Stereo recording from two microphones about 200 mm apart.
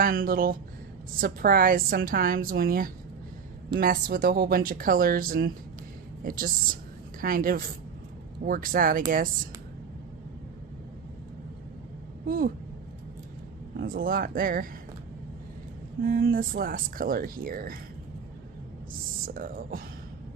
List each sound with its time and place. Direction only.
0.0 s speech: 45° right (ahead or behind)
12.3 s speech: 45° right (ahead or behind)
13.7 s speech: 45° right (ahead or behind)
16.0 s speech: 50° right (ahead or behind)
19.3 s speech: 45° right (ahead or behind)